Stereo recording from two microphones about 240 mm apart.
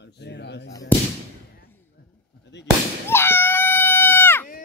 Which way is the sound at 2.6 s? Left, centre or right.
Centre.